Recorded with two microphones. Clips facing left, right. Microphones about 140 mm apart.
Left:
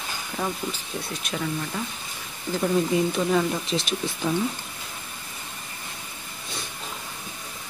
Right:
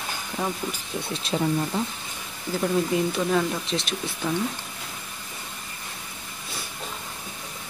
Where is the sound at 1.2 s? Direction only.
25° right (ahead or behind).